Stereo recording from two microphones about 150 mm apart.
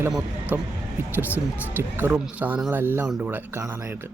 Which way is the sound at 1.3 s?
15° left (ahead or behind).